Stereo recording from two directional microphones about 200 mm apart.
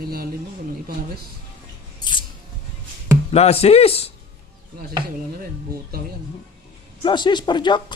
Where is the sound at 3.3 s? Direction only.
30° left (ahead or behind).